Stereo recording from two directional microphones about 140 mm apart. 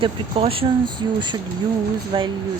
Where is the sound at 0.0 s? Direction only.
40° right (ahead or behind).